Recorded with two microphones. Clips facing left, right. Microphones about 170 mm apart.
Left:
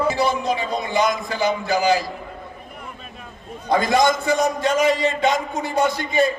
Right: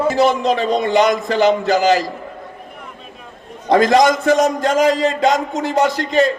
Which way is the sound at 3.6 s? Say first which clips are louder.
Right 5 dB; 90° right.